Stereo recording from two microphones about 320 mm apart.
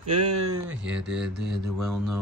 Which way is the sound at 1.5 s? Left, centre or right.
Centre.